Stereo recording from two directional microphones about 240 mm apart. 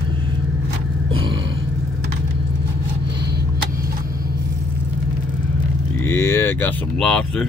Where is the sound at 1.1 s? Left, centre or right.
Right.